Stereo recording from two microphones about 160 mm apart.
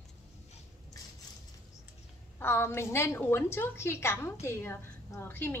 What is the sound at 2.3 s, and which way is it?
A woman's voice, 15° left (ahead or behind).